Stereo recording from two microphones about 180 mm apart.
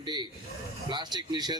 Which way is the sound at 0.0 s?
25° right (ahead or behind).